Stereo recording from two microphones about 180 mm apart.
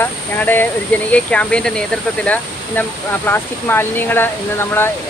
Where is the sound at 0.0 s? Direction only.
10° left (ahead or behind).